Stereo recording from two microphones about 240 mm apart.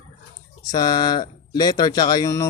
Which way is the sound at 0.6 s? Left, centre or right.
Centre.